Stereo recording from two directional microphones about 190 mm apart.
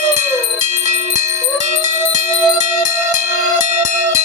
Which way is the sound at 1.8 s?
40° right (ahead or behind).